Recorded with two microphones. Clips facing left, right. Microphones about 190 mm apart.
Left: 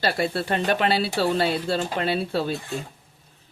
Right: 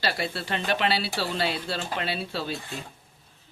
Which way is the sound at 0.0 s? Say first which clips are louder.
Left 5 dB; 50° left (ahead or behind).